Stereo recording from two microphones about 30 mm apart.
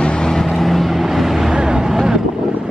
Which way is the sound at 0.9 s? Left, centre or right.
Centre.